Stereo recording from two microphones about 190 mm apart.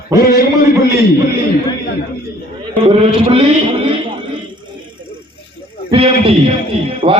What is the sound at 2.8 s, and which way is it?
A man's voice, 30° right (ahead or behind).